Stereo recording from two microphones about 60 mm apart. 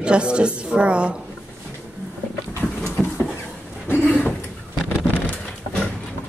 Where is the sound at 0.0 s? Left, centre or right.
Centre.